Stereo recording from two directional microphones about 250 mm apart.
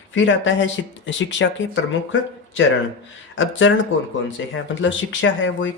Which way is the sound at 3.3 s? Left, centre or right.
Left.